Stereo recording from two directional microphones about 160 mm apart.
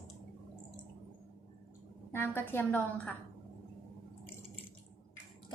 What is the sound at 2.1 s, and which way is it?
A woman's voice, 15° left (ahead or behind).